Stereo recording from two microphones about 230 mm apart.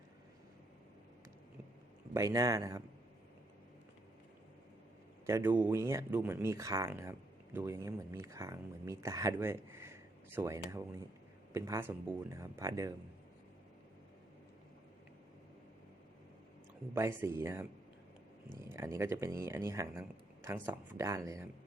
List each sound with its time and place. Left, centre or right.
2.1 s speech: centre
5.2 s speech: centre
16.9 s speech: centre
18.7 s speech: centre